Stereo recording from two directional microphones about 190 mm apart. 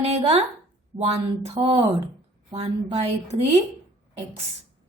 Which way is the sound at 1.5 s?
30° right (ahead or behind).